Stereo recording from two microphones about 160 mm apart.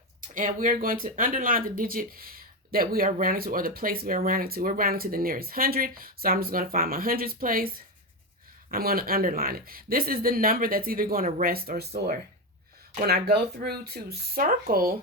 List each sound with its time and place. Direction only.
0.2 s speech: 55° right (ahead or behind)
8.7 s speech: 70° right (ahead or behind)
13.1 s speech: 75° right (ahead or behind)